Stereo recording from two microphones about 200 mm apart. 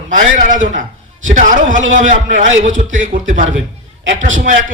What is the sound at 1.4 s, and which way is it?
A man's voice, 40° right (ahead or behind).